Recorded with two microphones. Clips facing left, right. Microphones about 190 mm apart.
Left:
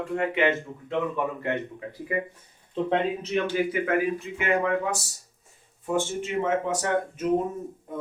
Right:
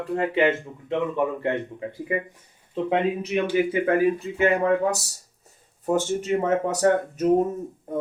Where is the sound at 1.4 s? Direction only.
25° right (ahead or behind).